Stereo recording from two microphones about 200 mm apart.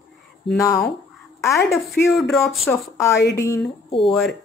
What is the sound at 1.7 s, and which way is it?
Speech, centre (ahead or behind).